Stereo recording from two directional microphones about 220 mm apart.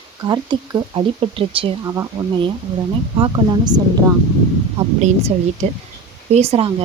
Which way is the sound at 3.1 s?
20° right (ahead or behind).